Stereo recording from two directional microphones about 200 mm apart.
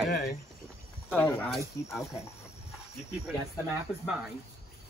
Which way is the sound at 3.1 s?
5° right (ahead or behind).